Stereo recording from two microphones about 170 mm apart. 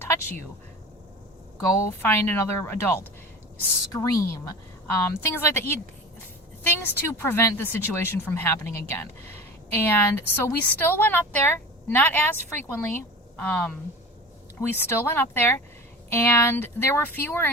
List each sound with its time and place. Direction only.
0.0 s a sound: 15° left (ahead or behind)
2.0 s a woman's voice: 15° left (ahead or behind)
14.8 s a woman's voice: 10° left (ahead or behind)